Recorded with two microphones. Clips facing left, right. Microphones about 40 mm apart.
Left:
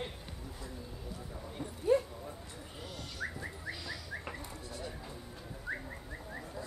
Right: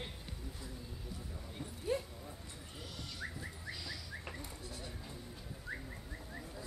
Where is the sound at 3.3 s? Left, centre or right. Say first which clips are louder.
Left 4 dB; centre.